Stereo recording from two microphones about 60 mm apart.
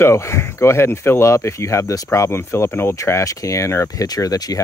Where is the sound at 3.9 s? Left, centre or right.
Left.